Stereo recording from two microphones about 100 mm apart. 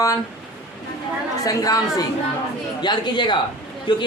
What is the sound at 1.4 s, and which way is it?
Speech, 35° left (ahead or behind).